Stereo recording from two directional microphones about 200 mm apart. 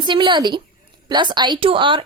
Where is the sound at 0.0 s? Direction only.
25° right (ahead or behind).